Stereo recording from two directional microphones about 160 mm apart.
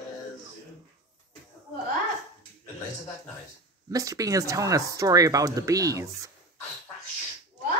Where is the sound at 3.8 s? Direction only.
20° right (ahead or behind).